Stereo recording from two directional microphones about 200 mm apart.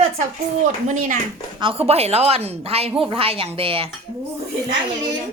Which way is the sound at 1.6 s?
30° right (ahead or behind).